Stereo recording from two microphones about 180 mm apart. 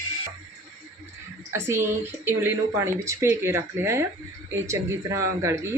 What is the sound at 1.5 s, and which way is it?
A woman's voice, 15° right (ahead or behind).